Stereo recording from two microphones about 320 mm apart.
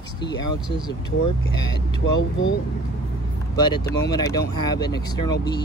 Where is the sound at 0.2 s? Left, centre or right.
Centre.